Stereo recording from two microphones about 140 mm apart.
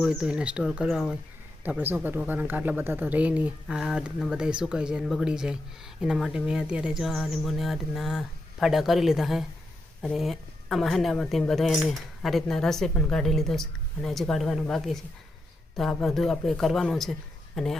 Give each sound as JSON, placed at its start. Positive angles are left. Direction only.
{"t": 0.0, "sound": "speech", "side_deg": -5}
{"t": 1.6, "sound": "speech", "side_deg": -10}